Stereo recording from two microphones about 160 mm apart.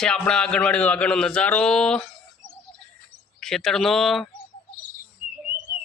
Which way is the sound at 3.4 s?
Centre (ahead or behind).